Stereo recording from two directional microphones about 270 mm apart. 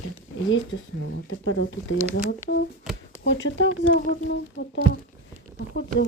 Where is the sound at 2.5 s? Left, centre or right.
Left.